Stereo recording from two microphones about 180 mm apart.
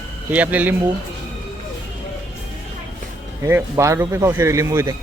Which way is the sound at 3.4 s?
15° right (ahead or behind).